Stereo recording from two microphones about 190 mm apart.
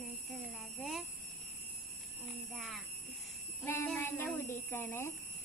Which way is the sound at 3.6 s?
10° left (ahead or behind).